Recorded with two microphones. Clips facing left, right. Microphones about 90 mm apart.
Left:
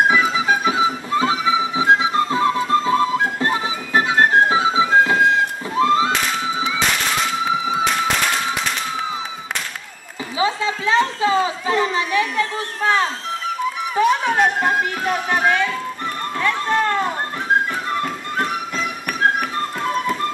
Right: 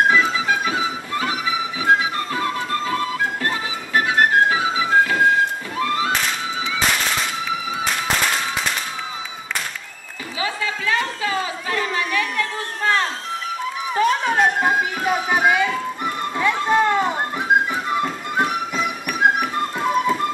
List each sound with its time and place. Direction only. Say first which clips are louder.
0.1 s music: left 1 dB; 15° left (ahead or behind)
10.4 s a sound: left 4 dB; 20° left (ahead or behind)
13.9 s music: left 1 dB; centre (ahead or behind)